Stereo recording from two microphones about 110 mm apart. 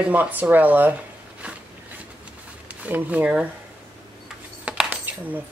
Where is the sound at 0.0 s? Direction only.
15° right (ahead or behind).